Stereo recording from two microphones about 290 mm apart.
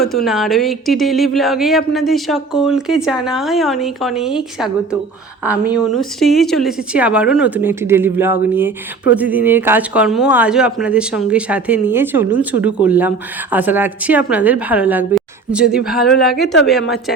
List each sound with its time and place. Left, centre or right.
0.3 s speech: centre
16.0 s speech: left